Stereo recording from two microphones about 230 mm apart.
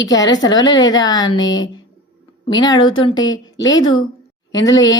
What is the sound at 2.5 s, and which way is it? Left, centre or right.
Speech, centre.